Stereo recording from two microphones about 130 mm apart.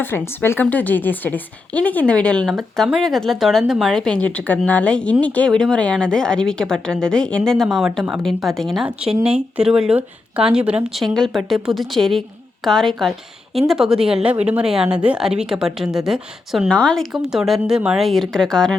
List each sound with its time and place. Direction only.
0.0 s a woman's voice: 15° left (ahead or behind); by 11.1 s 10° right (ahead or behind)
11.1 s a woman's voice: centre (ahead or behind)
16.6 s a woman's voice: 5° left (ahead or behind)